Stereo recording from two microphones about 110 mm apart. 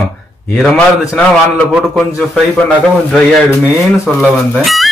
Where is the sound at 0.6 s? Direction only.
10° left (ahead or behind).